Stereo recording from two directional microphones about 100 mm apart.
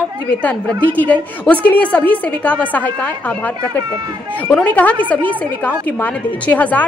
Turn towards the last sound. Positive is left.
turn(degrees=15)  # may be behind; listen again after turning